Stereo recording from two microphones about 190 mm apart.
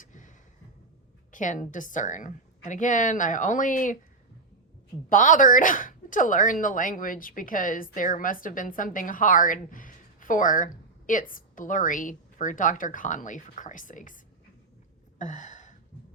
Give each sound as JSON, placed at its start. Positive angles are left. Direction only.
{"t": 0.0, "sound": "a sound", "side_deg": 40}
{"t": 1.3, "sound": "speech", "side_deg": 40}
{"t": 5.0, "sound": "speech", "side_deg": 45}
{"t": 15.2, "sound": "gasp", "side_deg": 40}